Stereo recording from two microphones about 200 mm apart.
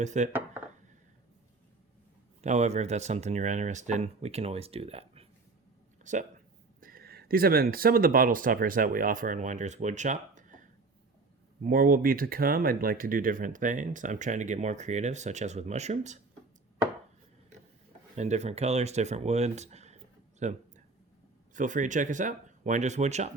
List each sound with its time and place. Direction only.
0.0 s speech: 35° right (ahead or behind)
0.3 s a sound: 10° right (ahead or behind)
2.4 s speech: 35° right (ahead or behind)
18.2 s speech: 35° right (ahead or behind)
20.4 s a sound: 35° right (ahead or behind)
21.5 s speech: 40° right (ahead or behind)